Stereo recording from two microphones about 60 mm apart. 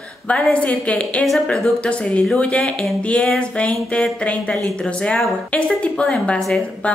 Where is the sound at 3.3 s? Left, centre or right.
Centre.